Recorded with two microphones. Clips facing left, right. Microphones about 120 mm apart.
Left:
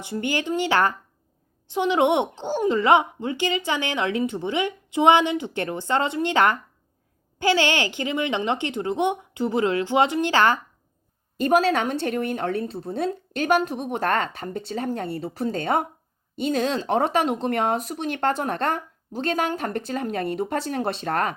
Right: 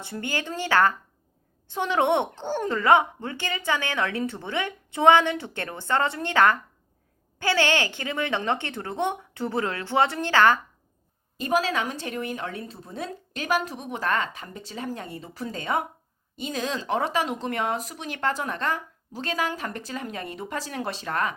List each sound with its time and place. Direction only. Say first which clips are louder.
0.0 s speech: left 5 dB; 20° left (ahead or behind)
11.3 s speech: left 5 dB; 60° left (ahead or behind)